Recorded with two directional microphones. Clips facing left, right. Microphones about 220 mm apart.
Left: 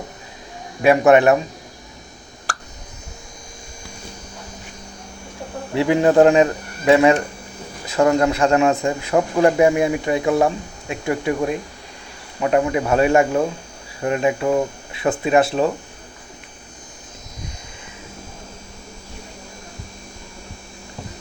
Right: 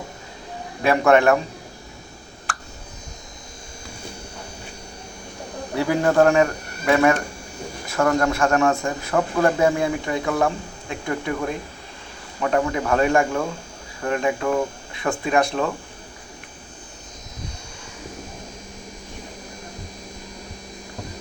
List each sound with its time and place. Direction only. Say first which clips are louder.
0.8 s speech: left 4 dB; 20° left (ahead or behind)
5.7 s a man's voice: left 4 dB; 20° left (ahead or behind)